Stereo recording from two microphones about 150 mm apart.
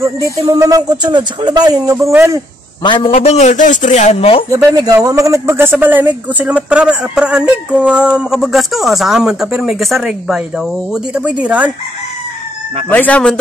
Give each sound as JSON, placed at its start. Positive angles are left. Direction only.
{"t": 0.5, "sound": "speech", "side_deg": -20}
{"t": 2.8, "sound": "a man's voice", "side_deg": 30}
{"t": 4.5, "sound": "a man's voice", "side_deg": -20}
{"t": 12.9, "sound": "speech", "side_deg": 10}